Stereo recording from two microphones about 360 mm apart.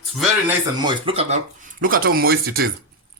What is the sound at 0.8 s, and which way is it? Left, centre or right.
Speech, centre.